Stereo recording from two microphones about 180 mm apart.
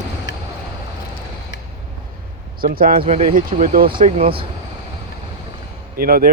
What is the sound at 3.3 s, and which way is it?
Speech, 50° right (ahead or behind).